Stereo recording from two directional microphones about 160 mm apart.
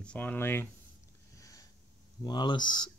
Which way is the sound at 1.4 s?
20° left (ahead or behind).